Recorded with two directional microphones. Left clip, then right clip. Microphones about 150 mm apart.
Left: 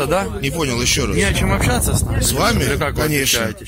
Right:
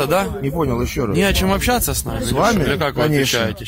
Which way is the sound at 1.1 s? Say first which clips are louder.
Right 1 dB; 40° right (ahead or behind).